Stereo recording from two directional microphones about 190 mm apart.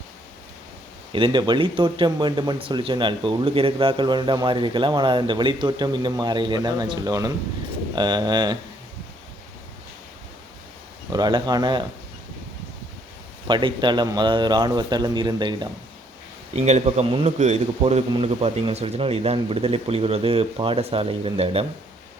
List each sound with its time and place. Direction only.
1.1 s speech: 25° right (ahead or behind)
11.1 s speech: 20° right (ahead or behind)
13.5 s speech: 25° right (ahead or behind)
16.6 s speech: 35° right (ahead or behind)